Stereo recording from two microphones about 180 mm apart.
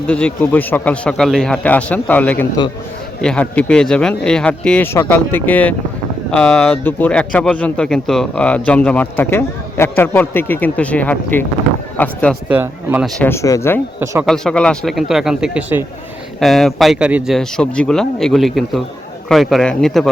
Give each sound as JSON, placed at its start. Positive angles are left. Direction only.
{"t": 0.1, "sound": "a man's voice", "side_deg": 5}
{"t": 12.5, "sound": "speech", "side_deg": -10}
{"t": 13.1, "sound": "a man's voice", "side_deg": 15}
{"t": 14.0, "sound": "speech", "side_deg": -15}
{"t": 14.3, "sound": "speech", "side_deg": 5}